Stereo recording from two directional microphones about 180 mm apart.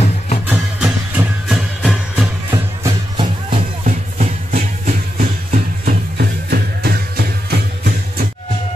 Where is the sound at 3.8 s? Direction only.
45° right (ahead or behind).